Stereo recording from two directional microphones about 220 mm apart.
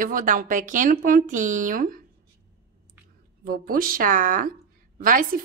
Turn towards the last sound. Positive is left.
turn(degrees=-40)  # may be behind; listen again after turning